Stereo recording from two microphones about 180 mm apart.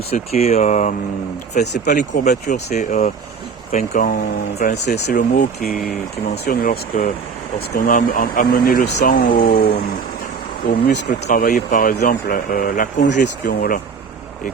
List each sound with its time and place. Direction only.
0.1 s speech: 35° left (ahead or behind)
1.6 s speech: 70° left (ahead or behind)
2.0 s speech: 45° left (ahead or behind)
4.6 s speech: 65° left (ahead or behind)
5.0 s speech: 50° left (ahead or behind)